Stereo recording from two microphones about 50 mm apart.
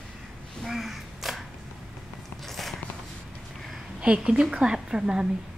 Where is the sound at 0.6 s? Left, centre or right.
Centre.